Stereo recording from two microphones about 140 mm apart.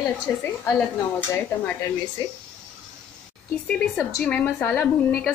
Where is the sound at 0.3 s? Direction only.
15° left (ahead or behind).